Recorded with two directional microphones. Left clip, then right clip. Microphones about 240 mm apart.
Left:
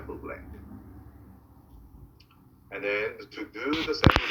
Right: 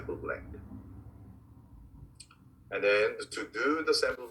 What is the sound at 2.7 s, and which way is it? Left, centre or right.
Speech, right.